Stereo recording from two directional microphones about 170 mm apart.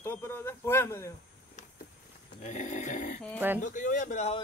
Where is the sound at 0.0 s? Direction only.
15° left (ahead or behind).